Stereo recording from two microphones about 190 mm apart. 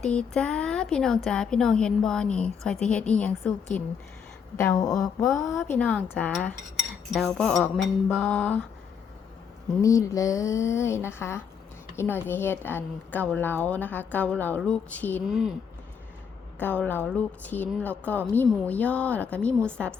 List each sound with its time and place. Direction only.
0.0 s a woman's voice: 5° left (ahead or behind)
4.9 s a woman's voice: centre (ahead or behind)
9.8 s a woman's voice: 15° left (ahead or behind)
15.3 s speech: 5° right (ahead or behind)
16.6 s a woman's voice: 10° left (ahead or behind)